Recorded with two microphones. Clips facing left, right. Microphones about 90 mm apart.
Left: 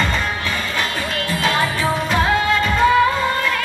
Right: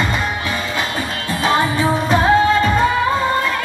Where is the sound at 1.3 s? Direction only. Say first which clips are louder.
Right 4 dB; 25° right (ahead or behind).